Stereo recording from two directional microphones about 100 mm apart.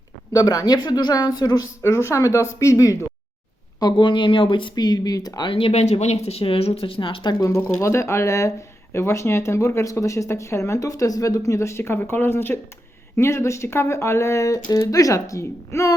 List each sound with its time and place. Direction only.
0.3 s speech: 40° left (ahead or behind)
1.8 s speech: 25° left (ahead or behind)
3.8 s speech: 50° left (ahead or behind)
4.7 s speech: 40° left (ahead or behind)
5.5 s speech: 65° left (ahead or behind)
7.8 s speech: 30° left (ahead or behind)